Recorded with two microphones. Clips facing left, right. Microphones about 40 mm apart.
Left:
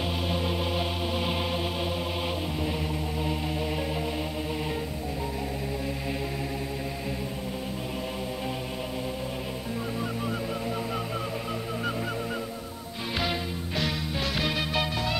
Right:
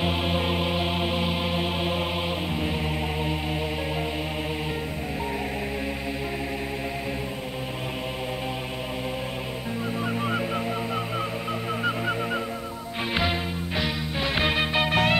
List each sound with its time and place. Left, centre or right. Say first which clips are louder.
0.0 s music: right 4 dB; right
13.7 s music: right 1 dB; centre
14.3 s music: right 6 dB; right
14.9 s music: right 8 dB; right